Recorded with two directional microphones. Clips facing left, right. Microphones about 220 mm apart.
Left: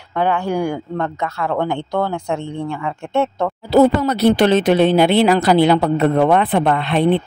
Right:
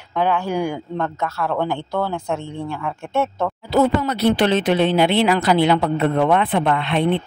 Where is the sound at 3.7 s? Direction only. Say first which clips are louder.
Left 5 dB; 40° left (ahead or behind).